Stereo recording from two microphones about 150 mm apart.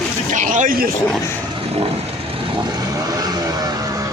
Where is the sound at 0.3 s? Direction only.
60° right (ahead or behind).